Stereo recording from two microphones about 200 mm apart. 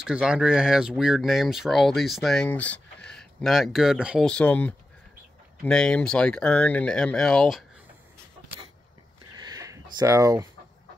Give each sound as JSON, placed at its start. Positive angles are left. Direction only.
{"t": 0.0, "sound": "speech", "side_deg": -5}
{"t": 9.4, "sound": "a sound", "side_deg": -15}
{"t": 9.9, "sound": "speech", "side_deg": -15}